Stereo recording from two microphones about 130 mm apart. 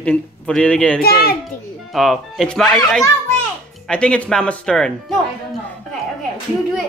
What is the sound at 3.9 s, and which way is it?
A man's voice, 5° left (ahead or behind).